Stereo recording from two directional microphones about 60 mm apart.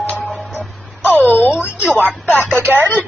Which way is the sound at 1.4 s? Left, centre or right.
Left.